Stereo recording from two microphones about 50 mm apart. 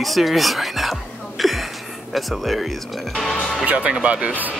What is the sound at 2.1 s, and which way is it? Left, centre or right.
Speech, centre.